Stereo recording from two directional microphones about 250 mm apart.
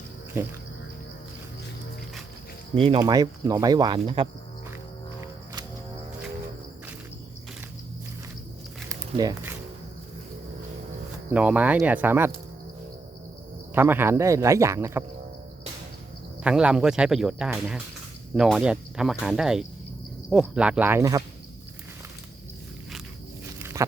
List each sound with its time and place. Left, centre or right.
0.4 s speech: centre
2.7 s speech: right
8.9 s a sound: centre
11.3 s speech: centre
13.7 s speech: centre
16.4 s speech: centre
23.6 s walk: centre